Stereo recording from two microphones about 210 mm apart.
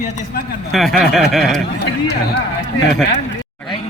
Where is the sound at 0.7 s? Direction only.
Centre (ahead or behind).